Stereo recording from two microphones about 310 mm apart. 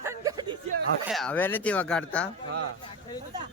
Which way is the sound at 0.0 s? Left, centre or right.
Centre.